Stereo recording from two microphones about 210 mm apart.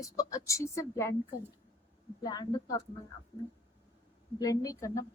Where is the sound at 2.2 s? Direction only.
20° left (ahead or behind).